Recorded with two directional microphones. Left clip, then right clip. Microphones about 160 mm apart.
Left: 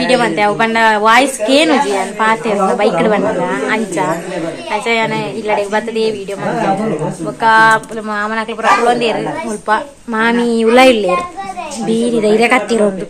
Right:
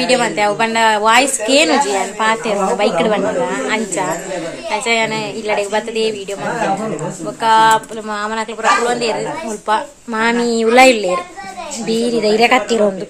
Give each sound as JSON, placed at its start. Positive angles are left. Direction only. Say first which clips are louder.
{"t": 0.0, "sound": "a woman's voice", "louder": "left 2 dB", "side_deg": -10}
{"t": 7.4, "sound": "speech", "louder": "left 2 dB", "side_deg": 0}
{"t": 8.8, "sound": "a woman's voice", "louder": "left 4 dB", "side_deg": 15}
{"t": 9.7, "sound": "a woman's voice", "louder": "left 2 dB", "side_deg": -10}
{"t": 11.9, "sound": "a woman's voice", "louder": "left 2 dB", "side_deg": -20}